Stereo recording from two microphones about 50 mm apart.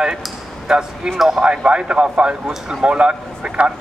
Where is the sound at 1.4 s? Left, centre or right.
Right.